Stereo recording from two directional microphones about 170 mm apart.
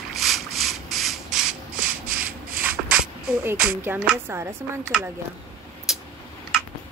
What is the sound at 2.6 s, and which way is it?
Music, 5° right (ahead or behind).